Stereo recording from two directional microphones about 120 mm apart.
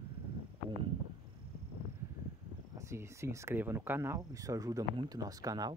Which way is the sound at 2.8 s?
25° right (ahead or behind).